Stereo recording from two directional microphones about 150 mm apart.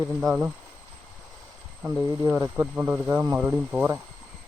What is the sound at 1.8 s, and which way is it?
Speech, 20° right (ahead or behind).